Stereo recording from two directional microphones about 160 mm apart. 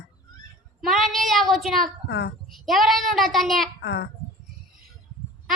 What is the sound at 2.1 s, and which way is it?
Speech, 90° left.